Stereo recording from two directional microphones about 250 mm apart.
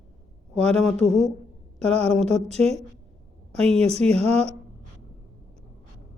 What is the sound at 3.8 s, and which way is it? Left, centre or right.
Speech, right.